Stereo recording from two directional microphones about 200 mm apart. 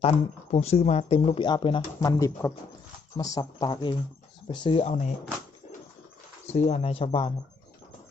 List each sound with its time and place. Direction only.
0.0 s speech: 30° left (ahead or behind)
6.5 s speech: 35° left (ahead or behind)